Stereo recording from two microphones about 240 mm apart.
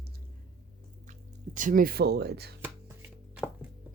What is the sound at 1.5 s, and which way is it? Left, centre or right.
Speech, right.